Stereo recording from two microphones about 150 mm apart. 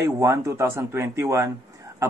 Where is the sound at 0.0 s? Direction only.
20° right (ahead or behind).